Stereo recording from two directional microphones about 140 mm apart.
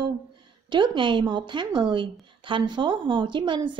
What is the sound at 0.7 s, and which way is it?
Speech, 35° right (ahead or behind).